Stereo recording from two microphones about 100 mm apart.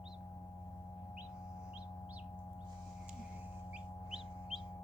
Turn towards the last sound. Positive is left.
turn(degrees=-5)  # may be behind; listen again after turning